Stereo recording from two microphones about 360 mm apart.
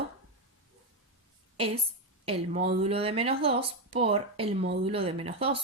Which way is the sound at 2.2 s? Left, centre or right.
Centre.